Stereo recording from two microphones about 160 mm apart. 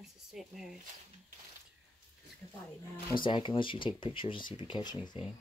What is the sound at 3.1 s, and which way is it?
Speech, 30° left (ahead or behind).